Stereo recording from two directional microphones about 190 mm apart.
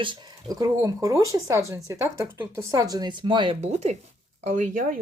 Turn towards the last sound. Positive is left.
turn(degrees=-45)  # may be behind; listen again after turning